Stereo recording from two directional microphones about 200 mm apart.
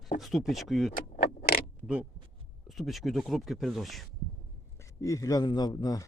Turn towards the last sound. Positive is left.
turn(degrees=20)  # may be behind; listen again after turning